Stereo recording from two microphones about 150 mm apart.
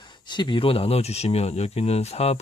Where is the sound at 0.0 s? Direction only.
30° left (ahead or behind).